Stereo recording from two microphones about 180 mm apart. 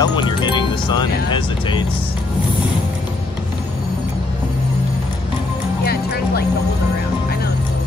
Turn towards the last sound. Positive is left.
turn(degrees=60)  # may be behind; listen again after turning